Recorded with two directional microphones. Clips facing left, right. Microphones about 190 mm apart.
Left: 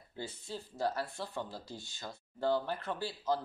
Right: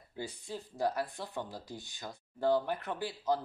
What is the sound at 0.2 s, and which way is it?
Speech, 15° right (ahead or behind).